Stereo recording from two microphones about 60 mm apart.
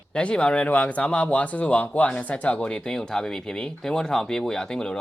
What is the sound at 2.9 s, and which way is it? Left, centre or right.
Speech, centre.